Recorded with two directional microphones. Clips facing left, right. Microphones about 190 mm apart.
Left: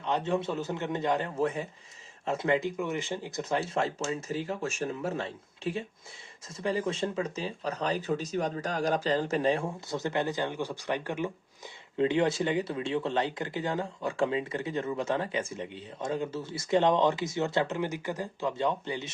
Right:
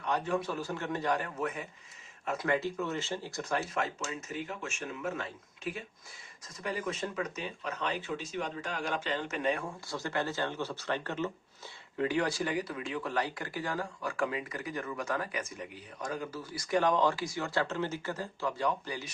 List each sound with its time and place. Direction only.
0.0 s speech: 25° left (ahead or behind)
3.8 s speech: 30° left (ahead or behind)